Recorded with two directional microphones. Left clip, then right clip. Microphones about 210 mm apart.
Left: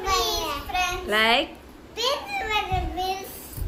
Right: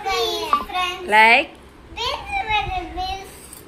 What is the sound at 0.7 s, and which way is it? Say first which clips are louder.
Child singing: right 6 dB; centre (ahead or behind).